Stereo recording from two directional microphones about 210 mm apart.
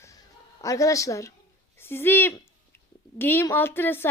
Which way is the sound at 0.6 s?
15° left (ahead or behind).